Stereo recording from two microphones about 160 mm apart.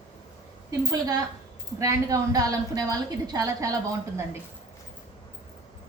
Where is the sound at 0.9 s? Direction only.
25° right (ahead or behind).